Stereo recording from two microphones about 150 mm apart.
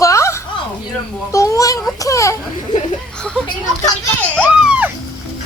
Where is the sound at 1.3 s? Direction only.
20° left (ahead or behind).